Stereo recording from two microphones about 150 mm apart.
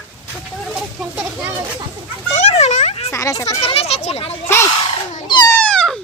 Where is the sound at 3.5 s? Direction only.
40° left (ahead or behind).